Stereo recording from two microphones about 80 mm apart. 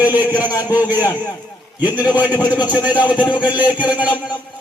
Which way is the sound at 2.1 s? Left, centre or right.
Centre.